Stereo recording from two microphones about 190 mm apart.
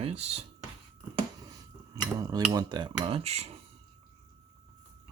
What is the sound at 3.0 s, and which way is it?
Speech, 30° right (ahead or behind).